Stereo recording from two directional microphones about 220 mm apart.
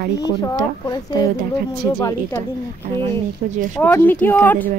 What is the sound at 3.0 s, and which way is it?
Speech, 30° right (ahead or behind).